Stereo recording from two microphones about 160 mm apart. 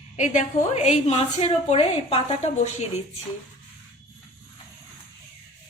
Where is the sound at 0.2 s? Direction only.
45° left (ahead or behind).